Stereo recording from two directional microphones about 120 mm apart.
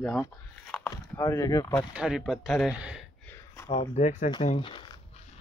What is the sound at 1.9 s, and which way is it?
Speech, 5° right (ahead or behind).